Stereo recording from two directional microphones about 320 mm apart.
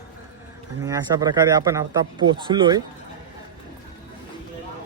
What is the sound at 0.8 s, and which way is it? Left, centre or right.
Speech, centre.